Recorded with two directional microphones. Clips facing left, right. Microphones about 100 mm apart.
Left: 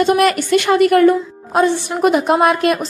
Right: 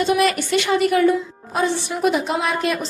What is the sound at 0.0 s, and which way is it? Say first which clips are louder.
A woman's voice: left 4 dB; 50° left (ahead or behind).